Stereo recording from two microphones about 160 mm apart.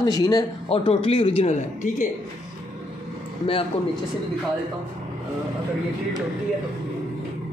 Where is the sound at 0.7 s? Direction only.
35° left (ahead or behind).